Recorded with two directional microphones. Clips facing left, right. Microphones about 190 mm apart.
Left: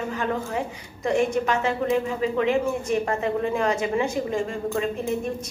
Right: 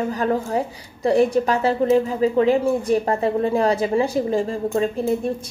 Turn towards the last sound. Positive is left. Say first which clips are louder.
# right 5 dB
turn(degrees=-35)  # may be behind; listen again after turning